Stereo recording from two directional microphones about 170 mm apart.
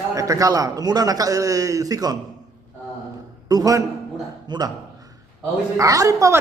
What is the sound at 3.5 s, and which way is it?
A man's voice, 20° right (ahead or behind).